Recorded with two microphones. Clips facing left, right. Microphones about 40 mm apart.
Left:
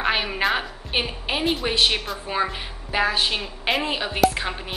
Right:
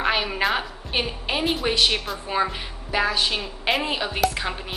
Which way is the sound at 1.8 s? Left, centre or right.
Centre.